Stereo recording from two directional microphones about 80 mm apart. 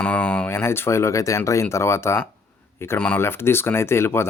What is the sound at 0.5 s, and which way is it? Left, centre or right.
A man's voice, left.